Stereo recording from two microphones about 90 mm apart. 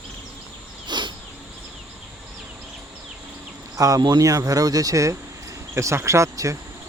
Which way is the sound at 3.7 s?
40° right (ahead or behind).